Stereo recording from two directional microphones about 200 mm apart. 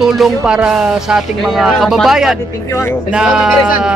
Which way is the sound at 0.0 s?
Centre (ahead or behind).